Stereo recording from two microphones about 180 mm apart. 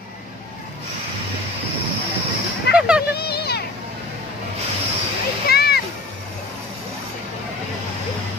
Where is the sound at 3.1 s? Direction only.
60° left (ahead or behind).